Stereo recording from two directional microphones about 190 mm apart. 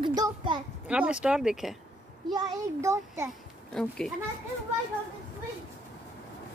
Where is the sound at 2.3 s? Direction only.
20° right (ahead or behind).